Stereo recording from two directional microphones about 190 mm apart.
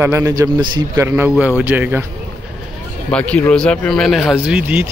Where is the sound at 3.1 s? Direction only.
5° left (ahead or behind).